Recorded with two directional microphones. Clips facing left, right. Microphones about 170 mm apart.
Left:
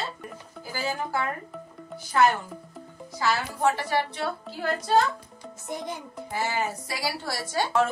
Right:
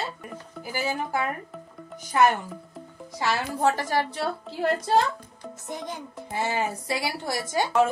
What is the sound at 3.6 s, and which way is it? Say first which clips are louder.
Speech: right 1 dB; 45° right (ahead or behind).